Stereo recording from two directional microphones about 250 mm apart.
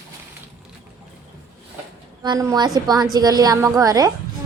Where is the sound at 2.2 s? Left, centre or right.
Centre.